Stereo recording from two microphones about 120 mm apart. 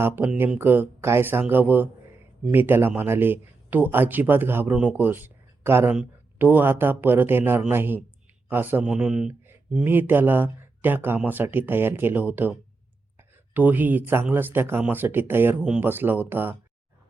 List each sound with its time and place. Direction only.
0.6 s speech: 15° right (ahead or behind)